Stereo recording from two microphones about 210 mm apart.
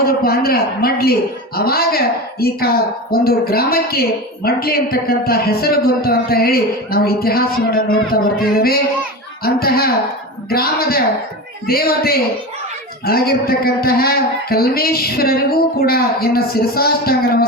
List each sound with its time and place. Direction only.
0.0 s a man's voice: 45° left (ahead or behind)